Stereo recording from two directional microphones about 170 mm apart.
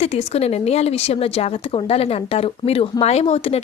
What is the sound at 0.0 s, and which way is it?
A woman's voice, 40° left (ahead or behind).